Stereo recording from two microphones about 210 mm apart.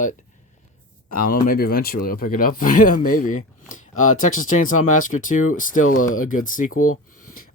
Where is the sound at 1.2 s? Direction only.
45° left (ahead or behind).